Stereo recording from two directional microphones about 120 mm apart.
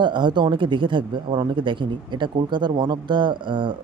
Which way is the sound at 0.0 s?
40° right (ahead or behind).